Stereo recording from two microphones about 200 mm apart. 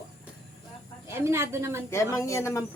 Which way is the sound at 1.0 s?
15° right (ahead or behind).